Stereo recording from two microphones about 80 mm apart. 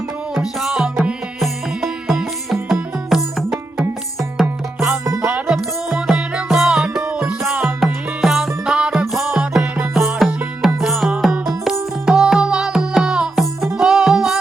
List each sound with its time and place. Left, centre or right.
0.3 s music: centre